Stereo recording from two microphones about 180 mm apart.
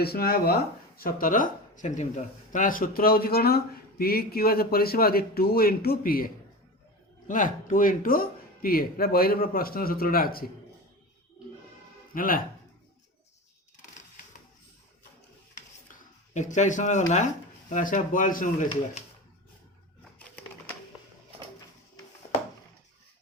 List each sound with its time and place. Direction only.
0.0 s speech: 60° left (ahead or behind)
12.1 s speech: 50° left (ahead or behind)
15.9 s a sound: 45° left (ahead or behind)
17.7 s speech: 45° left (ahead or behind)